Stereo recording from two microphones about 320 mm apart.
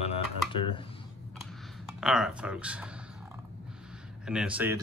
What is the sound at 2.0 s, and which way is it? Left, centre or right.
Speech, centre.